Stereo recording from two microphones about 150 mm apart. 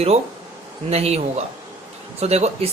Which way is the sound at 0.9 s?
45° right (ahead or behind).